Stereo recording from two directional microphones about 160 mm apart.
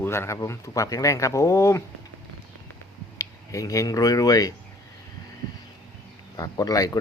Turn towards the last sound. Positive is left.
turn(degrees=20)  # may be behind; listen again after turning